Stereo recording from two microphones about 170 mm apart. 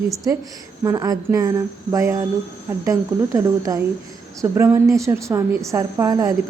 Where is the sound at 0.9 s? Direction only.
20° right (ahead or behind).